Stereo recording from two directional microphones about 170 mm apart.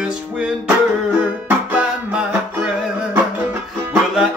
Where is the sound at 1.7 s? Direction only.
5° right (ahead or behind).